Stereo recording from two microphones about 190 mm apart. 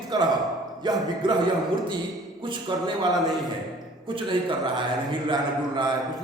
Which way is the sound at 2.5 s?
25° right (ahead or behind).